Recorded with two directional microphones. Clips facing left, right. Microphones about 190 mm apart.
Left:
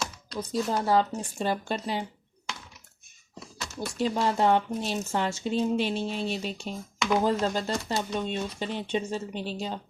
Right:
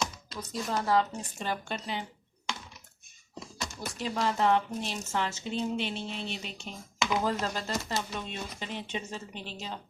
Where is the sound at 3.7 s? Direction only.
30° left (ahead or behind).